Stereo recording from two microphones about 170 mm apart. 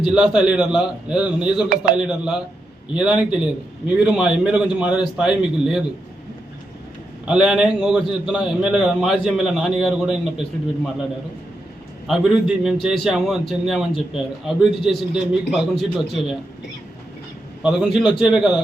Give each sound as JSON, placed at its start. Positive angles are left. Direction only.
{"t": 0.1, "sound": "a man's voice", "side_deg": -5}
{"t": 1.7, "sound": "speech", "side_deg": -55}
{"t": 2.0, "sound": "a man's voice", "side_deg": -5}
{"t": 7.3, "sound": "a man's voice", "side_deg": -5}
{"t": 12.0, "sound": "a man's voice", "side_deg": 0}
{"t": 17.6, "sound": "a man's voice", "side_deg": -5}